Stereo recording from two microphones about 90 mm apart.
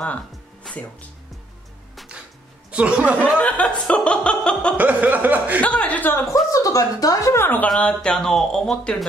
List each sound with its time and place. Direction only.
0.7 s music: 5° left (ahead or behind)
2.7 s a sound: 15° right (ahead or behind)
3.3 s speech: 15° left (ahead or behind)
4.7 s a sound: 15° right (ahead or behind)
5.6 s speech: 15° left (ahead or behind)
6.5 s speech: 40° left (ahead or behind)
7.3 s speech: 20° left (ahead or behind)